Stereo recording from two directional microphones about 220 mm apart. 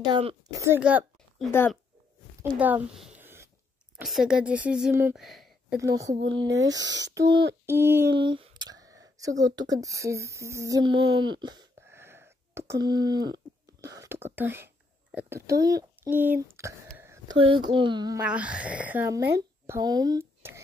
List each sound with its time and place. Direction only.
0.1 s speech: 25° right (ahead or behind)
0.6 s speech: 10° right (ahead or behind)
1.5 s speech: 10° left (ahead or behind)
2.5 s a woman's voice: 5° right (ahead or behind)
5.2 s a sound: centre (ahead or behind)
6.4 s speech: 15° right (ahead or behind)
6.8 s speech: 55° right (ahead or behind)
7.2 s speech: 20° right (ahead or behind)
8.2 s a sound: 20° right (ahead or behind)
9.4 s child singing: 15° right (ahead or behind)
15.6 s speech: 10° right (ahead or behind)
17.0 s a sound: 10° right (ahead or behind)
17.4 s speech: 20° right (ahead or behind)
18.2 s speech: 5° right (ahead or behind)